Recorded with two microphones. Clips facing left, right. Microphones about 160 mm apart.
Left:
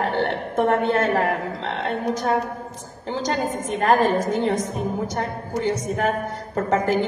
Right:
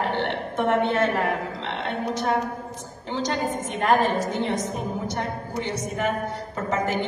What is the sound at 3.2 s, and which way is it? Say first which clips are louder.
A woman's voice: left 2 dB; 40° left (ahead or behind).